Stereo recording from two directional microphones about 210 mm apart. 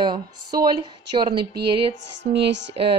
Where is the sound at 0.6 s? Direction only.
20° right (ahead or behind).